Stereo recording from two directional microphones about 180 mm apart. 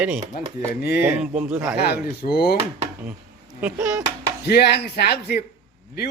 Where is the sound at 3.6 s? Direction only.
10° right (ahead or behind).